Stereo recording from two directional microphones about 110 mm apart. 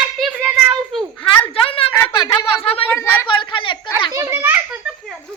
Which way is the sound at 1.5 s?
60° left (ahead or behind).